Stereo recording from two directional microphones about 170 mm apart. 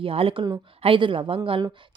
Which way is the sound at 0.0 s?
35° right (ahead or behind).